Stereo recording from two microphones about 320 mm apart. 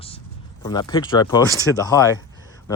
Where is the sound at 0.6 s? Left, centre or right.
Centre.